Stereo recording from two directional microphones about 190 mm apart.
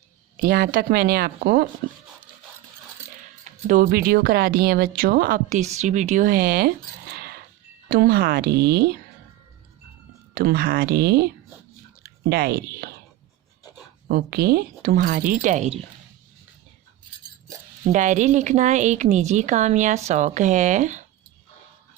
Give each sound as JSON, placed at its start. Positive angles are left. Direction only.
{"t": 0.4, "sound": "speech", "side_deg": -50}
{"t": 3.7, "sound": "speech", "side_deg": -45}
{"t": 10.3, "sound": "speech", "side_deg": -55}
{"t": 12.3, "sound": "speech", "side_deg": -55}
{"t": 14.1, "sound": "speech", "side_deg": -55}
{"t": 17.9, "sound": "a woman's voice", "side_deg": -40}